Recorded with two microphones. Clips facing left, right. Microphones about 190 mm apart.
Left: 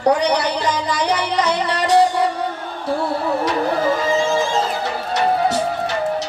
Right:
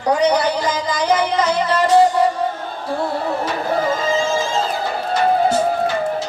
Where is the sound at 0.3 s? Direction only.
70° left (ahead or behind).